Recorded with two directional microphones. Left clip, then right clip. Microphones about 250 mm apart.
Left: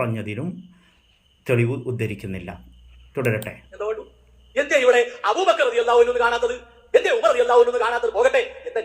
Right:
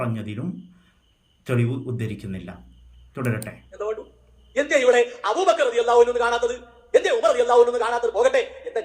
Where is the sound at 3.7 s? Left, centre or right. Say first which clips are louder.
Left 1 dB; centre.